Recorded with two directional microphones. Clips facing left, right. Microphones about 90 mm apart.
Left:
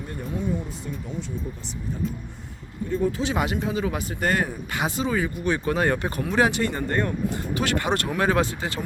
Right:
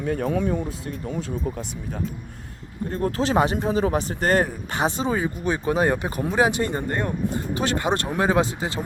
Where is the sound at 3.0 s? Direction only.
60° right (ahead or behind).